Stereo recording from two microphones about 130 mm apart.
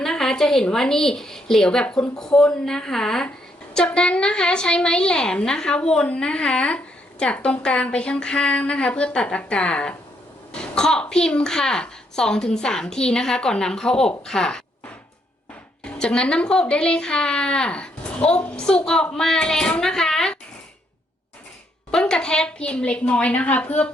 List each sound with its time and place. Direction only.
0.0 s a woman's voice: 5° left (ahead or behind)
15.8 s a woman's voice: 5° left (ahead or behind)
21.9 s a woman's voice: 5° left (ahead or behind)